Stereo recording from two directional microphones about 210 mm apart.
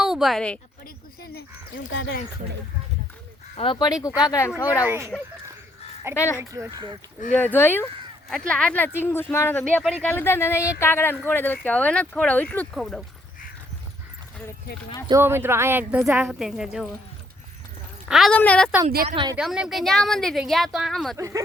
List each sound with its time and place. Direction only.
0.0 s a woman's voice: centre (ahead or behind)
1.2 s speech: 50° left (ahead or behind)
1.9 s speech: 60° left (ahead or behind)
3.6 s speech: 20° left (ahead or behind)
4.8 s speech: 10° right (ahead or behind)
6.1 s speech: 10° left (ahead or behind)
6.4 s speech: 15° right (ahead or behind)
7.3 s speech: 10° left (ahead or behind)
15.0 s speech: 15° right (ahead or behind)
18.1 s speech: centre (ahead or behind)
19.0 s speech: 20° right (ahead or behind)
19.4 s speech: 5° right (ahead or behind)
21.2 s speech: 15° right (ahead or behind)